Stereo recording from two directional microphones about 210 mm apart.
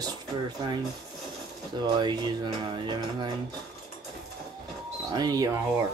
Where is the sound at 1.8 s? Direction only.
20° right (ahead or behind).